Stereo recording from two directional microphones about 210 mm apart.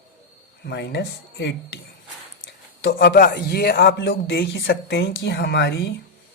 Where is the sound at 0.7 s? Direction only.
55° left (ahead or behind).